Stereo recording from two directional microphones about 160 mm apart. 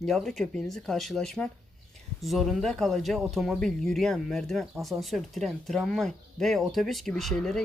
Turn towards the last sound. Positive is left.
turn(degrees=5)  # may be behind; listen again after turning